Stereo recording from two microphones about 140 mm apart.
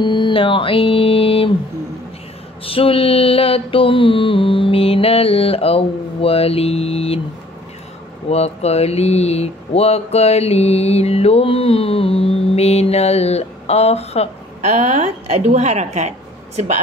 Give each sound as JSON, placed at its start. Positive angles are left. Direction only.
{"t": 0.0, "sound": "a sound", "side_deg": 35}
{"t": 2.6, "sound": "speech", "side_deg": 40}
{"t": 8.3, "sound": "speech", "side_deg": 50}
{"t": 14.6, "sound": "a woman's voice", "side_deg": -55}